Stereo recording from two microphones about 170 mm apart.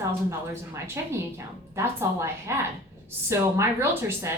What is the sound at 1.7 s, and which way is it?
A woman's voice, 15° right (ahead or behind).